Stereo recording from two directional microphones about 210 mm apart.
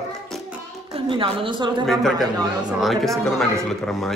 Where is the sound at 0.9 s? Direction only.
25° right (ahead or behind).